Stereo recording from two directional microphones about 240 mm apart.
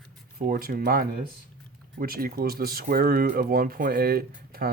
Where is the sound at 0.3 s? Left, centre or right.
Right.